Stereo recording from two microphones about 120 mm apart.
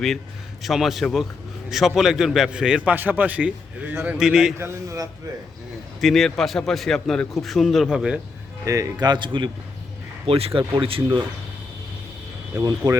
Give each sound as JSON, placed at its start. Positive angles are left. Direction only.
{"t": 0.6, "sound": "a man's voice", "side_deg": 0}
{"t": 4.5, "sound": "a man's voice", "side_deg": -20}
{"t": 6.0, "sound": "a man's voice", "side_deg": 0}
{"t": 8.6, "sound": "speech", "side_deg": -25}
{"t": 10.2, "sound": "speech", "side_deg": -55}
{"t": 12.5, "sound": "a man's voice", "side_deg": -30}